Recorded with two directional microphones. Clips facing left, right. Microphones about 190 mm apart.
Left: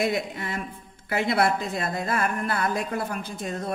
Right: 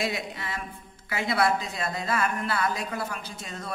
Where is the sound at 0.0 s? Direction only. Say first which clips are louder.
Left 5 dB; 50° left (ahead or behind).